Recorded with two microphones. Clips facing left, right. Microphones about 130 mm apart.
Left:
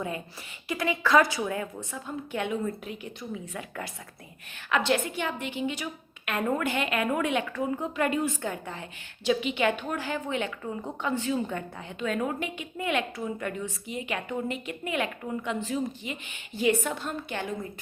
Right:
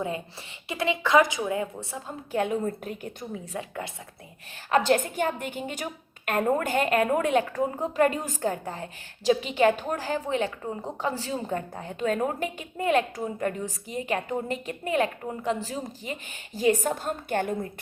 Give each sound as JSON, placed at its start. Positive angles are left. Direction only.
{"t": 0.7, "sound": "a woman's voice", "side_deg": -25}
{"t": 1.9, "sound": "a woman's voice", "side_deg": -35}
{"t": 3.5, "sound": "a woman's voice", "side_deg": -30}
{"t": 4.7, "sound": "a woman's voice", "side_deg": -40}